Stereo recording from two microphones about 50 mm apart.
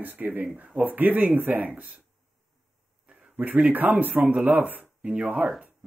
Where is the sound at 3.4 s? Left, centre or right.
Right.